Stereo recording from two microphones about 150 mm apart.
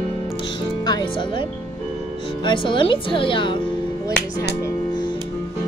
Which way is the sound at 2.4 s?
35° left (ahead or behind).